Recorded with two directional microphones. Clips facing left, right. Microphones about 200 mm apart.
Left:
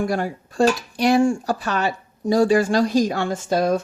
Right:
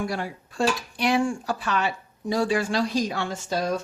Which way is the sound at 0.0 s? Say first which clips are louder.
Left 6 dB; 45° left (ahead or behind).